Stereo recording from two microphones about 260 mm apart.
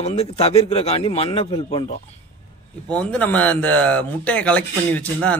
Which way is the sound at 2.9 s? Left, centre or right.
Centre.